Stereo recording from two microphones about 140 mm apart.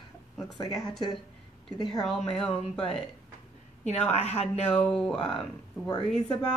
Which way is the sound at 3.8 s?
55° left (ahead or behind).